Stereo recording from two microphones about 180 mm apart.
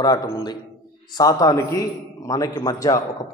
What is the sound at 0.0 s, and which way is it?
A man's voice, 20° left (ahead or behind).